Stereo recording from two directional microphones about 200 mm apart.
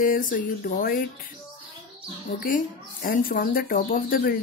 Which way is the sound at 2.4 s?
40° left (ahead or behind).